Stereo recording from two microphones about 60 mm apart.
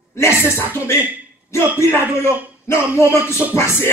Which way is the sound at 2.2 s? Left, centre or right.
Left.